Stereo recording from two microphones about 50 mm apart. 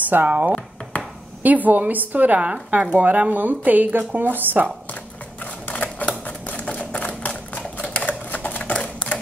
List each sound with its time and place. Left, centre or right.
0.1 s speech: right
0.9 s a sound: left
1.4 s speech: right
5.4 s typewriter: left